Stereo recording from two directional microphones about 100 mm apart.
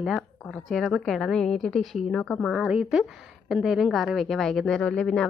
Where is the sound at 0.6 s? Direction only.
Centre (ahead or behind).